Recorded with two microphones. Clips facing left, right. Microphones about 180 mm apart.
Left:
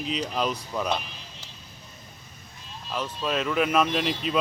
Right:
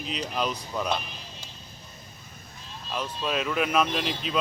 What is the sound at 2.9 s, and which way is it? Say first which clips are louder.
Speech: left 1 dB; centre (ahead or behind).